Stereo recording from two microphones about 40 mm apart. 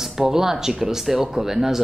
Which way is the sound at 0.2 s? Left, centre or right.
Centre.